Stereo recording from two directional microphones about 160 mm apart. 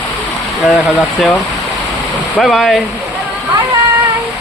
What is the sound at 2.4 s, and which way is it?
Speech, centre (ahead or behind).